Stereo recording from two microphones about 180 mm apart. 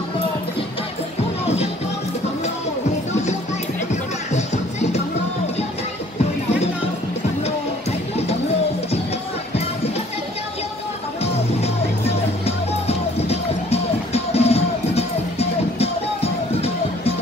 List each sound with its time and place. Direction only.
3.9 s music: 40° left (ahead or behind)
11.3 s music: 35° left (ahead or behind)